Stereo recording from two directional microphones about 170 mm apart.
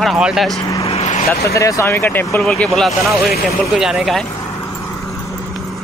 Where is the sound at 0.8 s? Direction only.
40° left (ahead or behind).